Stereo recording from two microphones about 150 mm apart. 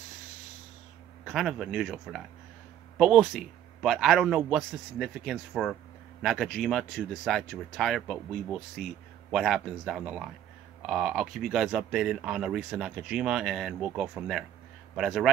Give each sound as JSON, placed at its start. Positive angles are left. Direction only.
{"t": 1.2, "sound": "speech", "side_deg": 0}